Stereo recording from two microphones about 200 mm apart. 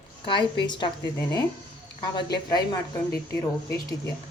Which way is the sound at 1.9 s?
20° left (ahead or behind).